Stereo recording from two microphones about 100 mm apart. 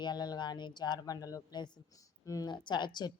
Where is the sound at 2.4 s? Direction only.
50° left (ahead or behind).